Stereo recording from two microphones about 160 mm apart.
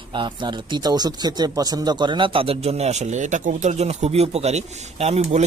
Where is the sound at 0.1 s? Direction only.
30° right (ahead or behind).